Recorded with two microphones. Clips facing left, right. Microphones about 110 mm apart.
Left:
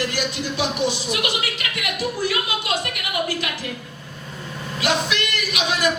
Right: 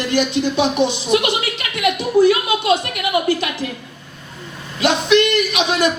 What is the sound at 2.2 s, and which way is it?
A woman's voice, 25° right (ahead or behind).